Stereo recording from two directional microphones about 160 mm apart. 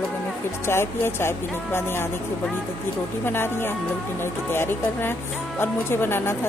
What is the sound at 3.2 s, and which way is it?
Speech, 15° left (ahead or behind).